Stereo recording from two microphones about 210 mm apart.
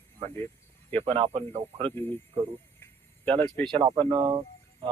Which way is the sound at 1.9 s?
10° left (ahead or behind).